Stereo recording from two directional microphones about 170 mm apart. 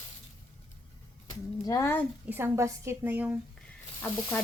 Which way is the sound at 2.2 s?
15° right (ahead or behind).